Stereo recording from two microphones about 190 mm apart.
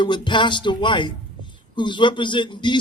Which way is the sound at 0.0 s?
25° left (ahead or behind).